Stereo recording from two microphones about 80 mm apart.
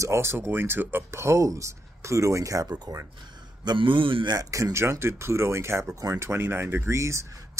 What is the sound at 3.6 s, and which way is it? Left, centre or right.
Speech, right.